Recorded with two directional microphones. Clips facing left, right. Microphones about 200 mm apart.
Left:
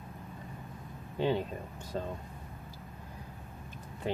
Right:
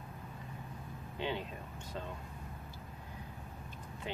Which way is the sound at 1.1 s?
40° left (ahead or behind).